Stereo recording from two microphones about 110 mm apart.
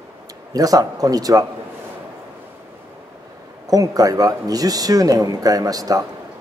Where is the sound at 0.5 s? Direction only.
35° right (ahead or behind).